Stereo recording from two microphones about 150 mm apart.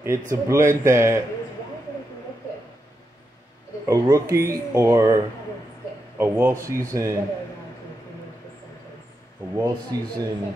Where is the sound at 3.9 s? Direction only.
20° right (ahead or behind).